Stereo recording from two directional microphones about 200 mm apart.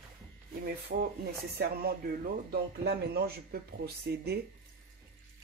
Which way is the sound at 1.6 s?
50° right (ahead or behind).